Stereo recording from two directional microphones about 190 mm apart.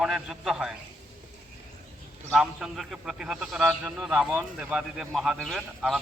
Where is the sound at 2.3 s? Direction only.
Centre (ahead or behind).